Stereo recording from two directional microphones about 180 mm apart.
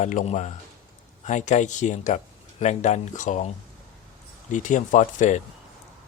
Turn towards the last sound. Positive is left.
turn(degrees=45)  # may be behind; listen again after turning